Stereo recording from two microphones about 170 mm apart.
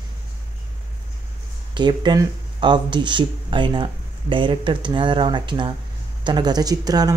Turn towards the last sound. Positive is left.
turn(degrees=-20)  # may be behind; listen again after turning